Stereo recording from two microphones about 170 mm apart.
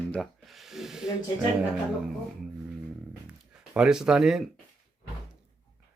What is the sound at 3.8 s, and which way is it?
Speech, 5° right (ahead or behind).